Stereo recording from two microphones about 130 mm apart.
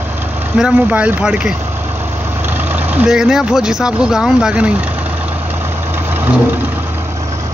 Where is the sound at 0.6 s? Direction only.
5° right (ahead or behind).